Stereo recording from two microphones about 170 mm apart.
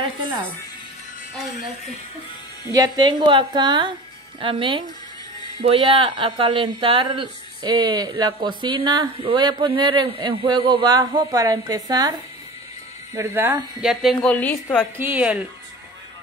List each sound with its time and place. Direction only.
2.7 s speech: 25° right (ahead or behind)
13.7 s a woman's voice: 5° right (ahead or behind)
15.0 s speech: 10° right (ahead or behind)